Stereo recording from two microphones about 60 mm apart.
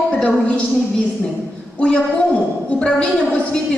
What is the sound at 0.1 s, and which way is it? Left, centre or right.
Speech, centre.